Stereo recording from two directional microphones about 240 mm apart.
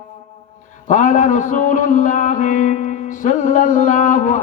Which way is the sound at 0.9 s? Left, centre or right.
Left.